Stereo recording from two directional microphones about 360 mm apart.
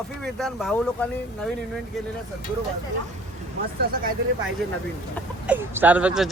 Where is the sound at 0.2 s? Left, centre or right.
Centre.